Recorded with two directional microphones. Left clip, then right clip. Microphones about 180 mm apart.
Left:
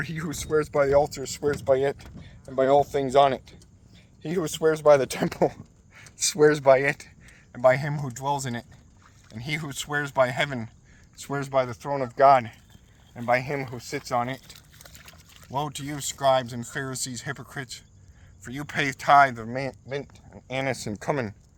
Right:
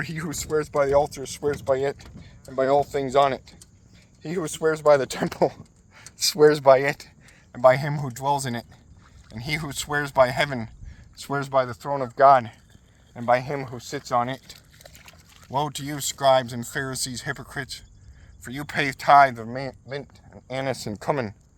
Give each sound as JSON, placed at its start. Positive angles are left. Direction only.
{"t": 0.0, "sound": "speech", "side_deg": -25}
{"t": 14.5, "sound": "pour", "side_deg": 35}
{"t": 14.9, "sound": "dog", "side_deg": 20}
{"t": 15.4, "sound": "speech", "side_deg": -35}